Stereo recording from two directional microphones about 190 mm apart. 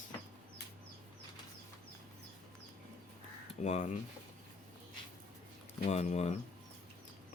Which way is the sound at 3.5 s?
35° left (ahead or behind).